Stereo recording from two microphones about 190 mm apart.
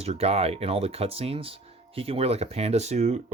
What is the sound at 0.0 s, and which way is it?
Speech, 30° right (ahead or behind).